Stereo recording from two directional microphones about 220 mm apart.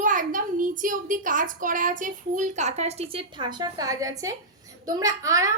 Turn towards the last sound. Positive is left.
turn(degrees=-15)  # may be behind; listen again after turning